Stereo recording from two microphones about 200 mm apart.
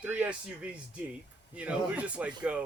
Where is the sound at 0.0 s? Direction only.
10° right (ahead or behind).